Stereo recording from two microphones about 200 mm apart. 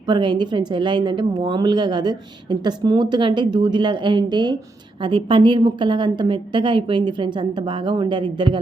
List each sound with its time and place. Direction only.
0.1 s a woman's voice: 20° right (ahead or behind)